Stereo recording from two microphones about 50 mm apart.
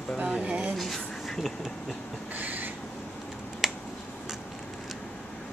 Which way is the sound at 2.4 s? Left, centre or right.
Right.